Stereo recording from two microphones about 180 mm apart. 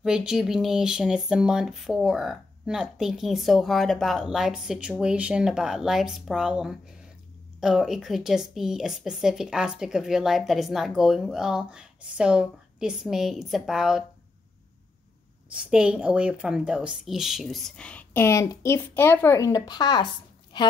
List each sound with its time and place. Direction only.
0.0 s speech: 5° right (ahead or behind)
15.5 s a woman's voice: 5° right (ahead or behind); by 20.7 s 25° left (ahead or behind)